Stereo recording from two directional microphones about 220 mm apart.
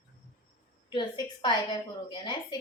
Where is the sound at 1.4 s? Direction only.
20° left (ahead or behind).